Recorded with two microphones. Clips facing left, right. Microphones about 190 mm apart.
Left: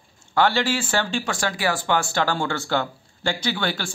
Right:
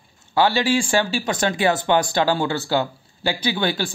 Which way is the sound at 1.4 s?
20° right (ahead or behind).